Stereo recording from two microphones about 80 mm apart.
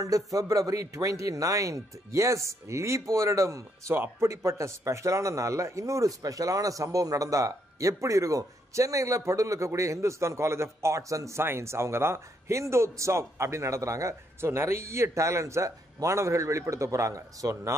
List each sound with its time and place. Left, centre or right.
0.0 s speech: right
3.9 s speech: right
4.3 s speech: right